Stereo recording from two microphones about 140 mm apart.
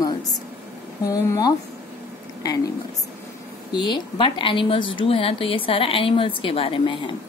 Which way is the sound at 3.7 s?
35° left (ahead or behind).